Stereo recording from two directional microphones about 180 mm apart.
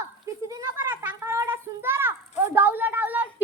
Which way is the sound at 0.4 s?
15° right (ahead or behind).